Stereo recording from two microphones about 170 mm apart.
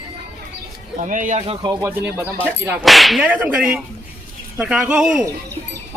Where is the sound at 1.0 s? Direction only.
50° right (ahead or behind).